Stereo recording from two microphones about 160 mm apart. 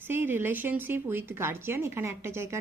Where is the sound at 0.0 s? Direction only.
10° right (ahead or behind).